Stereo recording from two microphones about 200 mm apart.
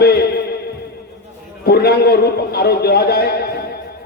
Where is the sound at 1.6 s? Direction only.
50° left (ahead or behind).